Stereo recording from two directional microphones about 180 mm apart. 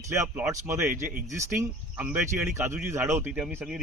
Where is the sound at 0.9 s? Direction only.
50° right (ahead or behind).